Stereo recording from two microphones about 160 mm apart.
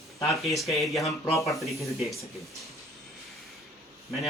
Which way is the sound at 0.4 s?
Centre (ahead or behind).